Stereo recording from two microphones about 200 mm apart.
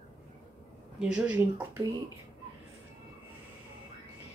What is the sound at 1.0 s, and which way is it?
Speech, 5° right (ahead or behind).